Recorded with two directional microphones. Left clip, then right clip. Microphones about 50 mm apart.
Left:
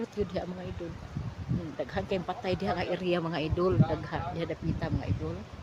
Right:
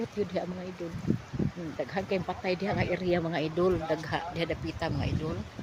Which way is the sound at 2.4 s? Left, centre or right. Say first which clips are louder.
Right 1 dB; centre.